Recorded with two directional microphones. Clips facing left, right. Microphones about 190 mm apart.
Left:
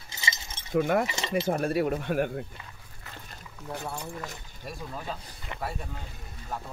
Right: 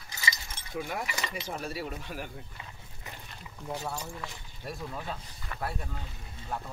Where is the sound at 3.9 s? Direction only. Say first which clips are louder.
Left 2 dB; 50° left (ahead or behind).